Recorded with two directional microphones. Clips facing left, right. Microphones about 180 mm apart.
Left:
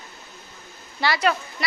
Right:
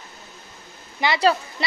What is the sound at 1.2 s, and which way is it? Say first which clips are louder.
Speech: right 3 dB; 30° right (ahead or behind).